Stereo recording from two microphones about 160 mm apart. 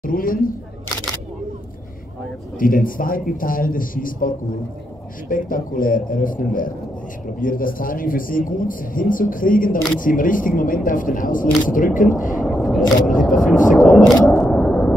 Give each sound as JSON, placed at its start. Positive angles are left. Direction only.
{"t": 0.0, "sound": "a man's voice", "side_deg": 60}
{"t": 2.6, "sound": "a man's voice", "side_deg": 60}
{"t": 12.5, "sound": "single-lens reflex camera", "side_deg": 0}
{"t": 13.2, "sound": "a sound", "side_deg": 0}
{"t": 13.7, "sound": "single-lens reflex camera", "side_deg": 0}